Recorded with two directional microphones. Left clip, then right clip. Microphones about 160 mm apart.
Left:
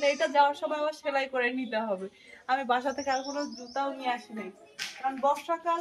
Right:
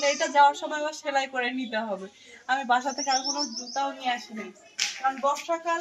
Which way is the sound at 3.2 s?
30° left (ahead or behind).